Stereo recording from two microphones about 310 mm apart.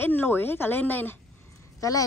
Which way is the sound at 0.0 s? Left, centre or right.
Centre.